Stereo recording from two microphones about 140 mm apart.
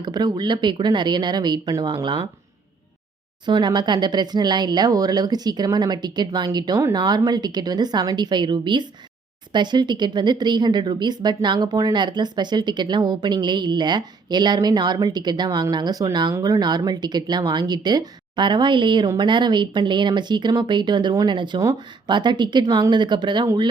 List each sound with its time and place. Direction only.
0.0 s speech: 30° right (ahead or behind)
3.4 s speech: 30° right (ahead or behind)